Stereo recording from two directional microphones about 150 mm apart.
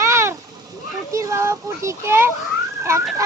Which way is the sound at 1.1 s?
20° right (ahead or behind).